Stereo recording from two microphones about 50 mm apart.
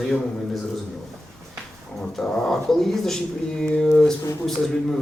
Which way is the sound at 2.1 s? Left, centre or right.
Centre.